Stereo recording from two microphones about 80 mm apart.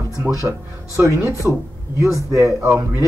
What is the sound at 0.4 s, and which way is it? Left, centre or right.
Speech, right.